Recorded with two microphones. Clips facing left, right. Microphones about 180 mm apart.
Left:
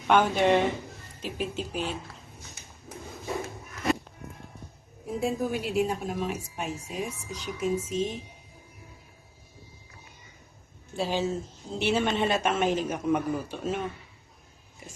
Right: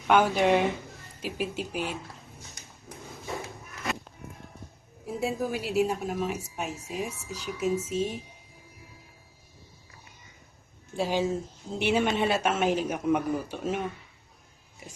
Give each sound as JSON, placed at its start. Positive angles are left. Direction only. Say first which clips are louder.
{"t": 0.1, "sound": "a man's voice", "louder": "even", "side_deg": -5}
{"t": 5.2, "sound": "a woman's voice", "louder": "left 1 dB", "side_deg": -5}
{"t": 7.8, "sound": "speech", "louder": "even", "side_deg": 30}
{"t": 10.9, "sound": "a man's voice", "louder": "right 1 dB", "side_deg": -10}